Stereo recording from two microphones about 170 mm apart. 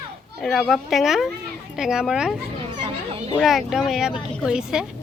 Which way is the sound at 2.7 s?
25° right (ahead or behind).